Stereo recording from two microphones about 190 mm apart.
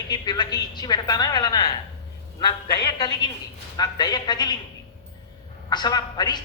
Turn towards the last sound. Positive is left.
turn(degrees=20)  # may be behind; listen again after turning